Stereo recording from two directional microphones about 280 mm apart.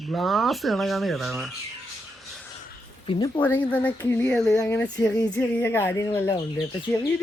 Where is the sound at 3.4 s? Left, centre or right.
Centre.